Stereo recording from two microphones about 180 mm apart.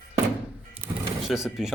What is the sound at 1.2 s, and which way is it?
Speech, centre (ahead or behind).